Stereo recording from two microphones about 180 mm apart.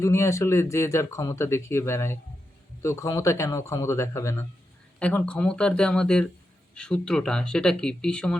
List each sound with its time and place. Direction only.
0.0 s speech: 15° left (ahead or behind)